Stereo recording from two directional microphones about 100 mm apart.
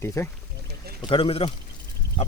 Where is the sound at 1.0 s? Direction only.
65° left (ahead or behind).